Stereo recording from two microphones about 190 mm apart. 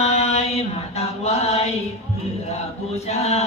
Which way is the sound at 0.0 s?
35° left (ahead or behind).